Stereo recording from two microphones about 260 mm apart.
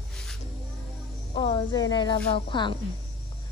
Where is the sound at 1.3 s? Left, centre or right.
Centre.